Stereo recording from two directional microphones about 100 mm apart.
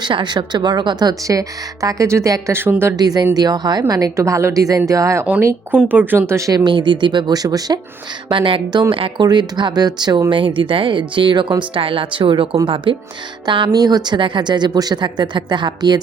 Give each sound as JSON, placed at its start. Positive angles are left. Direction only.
{"t": 0.0, "sound": "speech", "side_deg": -50}
{"t": 2.9, "sound": "speech", "side_deg": -40}
{"t": 5.7, "sound": "speech", "side_deg": -15}
{"t": 6.7, "sound": "speech", "side_deg": -50}
{"t": 8.3, "sound": "speech", "side_deg": -55}
{"t": 9.2, "sound": "speech", "side_deg": -45}
{"t": 10.2, "sound": "speech", "side_deg": -60}